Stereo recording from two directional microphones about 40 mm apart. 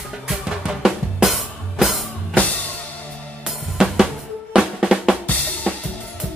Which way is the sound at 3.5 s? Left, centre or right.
Centre.